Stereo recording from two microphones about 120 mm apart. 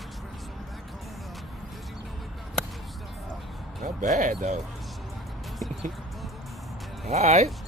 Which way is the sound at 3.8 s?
85° right.